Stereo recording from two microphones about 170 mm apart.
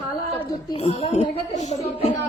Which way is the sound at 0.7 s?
35° left (ahead or behind).